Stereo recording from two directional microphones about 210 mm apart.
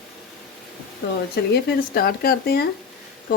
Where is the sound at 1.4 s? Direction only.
55° left (ahead or behind).